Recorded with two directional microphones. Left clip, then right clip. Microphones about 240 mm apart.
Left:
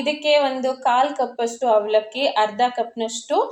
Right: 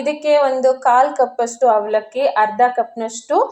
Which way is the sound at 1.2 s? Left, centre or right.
Right.